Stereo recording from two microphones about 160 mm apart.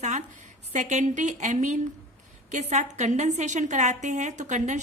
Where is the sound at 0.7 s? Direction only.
45° right (ahead or behind).